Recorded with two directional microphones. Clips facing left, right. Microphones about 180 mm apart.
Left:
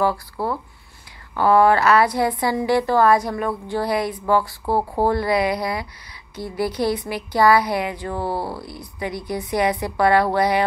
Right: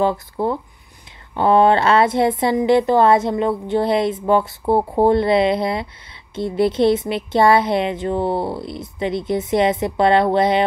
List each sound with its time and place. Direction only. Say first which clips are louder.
0.0 s a woman's voice: right 3 dB; 20° right (ahead or behind)